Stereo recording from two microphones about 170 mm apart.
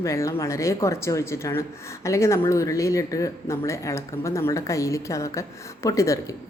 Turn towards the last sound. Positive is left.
turn(degrees=20)  # may be behind; listen again after turning